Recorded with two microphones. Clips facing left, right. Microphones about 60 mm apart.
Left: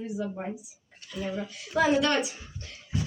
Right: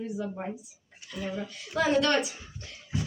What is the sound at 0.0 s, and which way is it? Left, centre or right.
A child's voice, centre.